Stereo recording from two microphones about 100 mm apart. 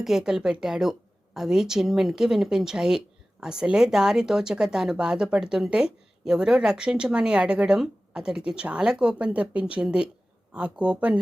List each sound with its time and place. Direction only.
0.0 s speech: 5° right (ahead or behind)